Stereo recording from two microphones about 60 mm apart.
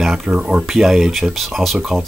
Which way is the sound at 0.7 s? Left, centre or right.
Centre.